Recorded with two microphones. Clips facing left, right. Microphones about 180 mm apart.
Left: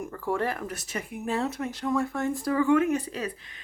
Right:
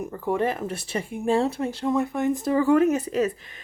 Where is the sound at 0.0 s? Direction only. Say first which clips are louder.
Right 4 dB; 20° right (ahead or behind).